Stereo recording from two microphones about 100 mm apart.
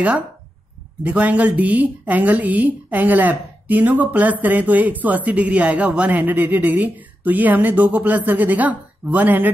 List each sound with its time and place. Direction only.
1.0 s a woman's voice: 15° right (ahead or behind)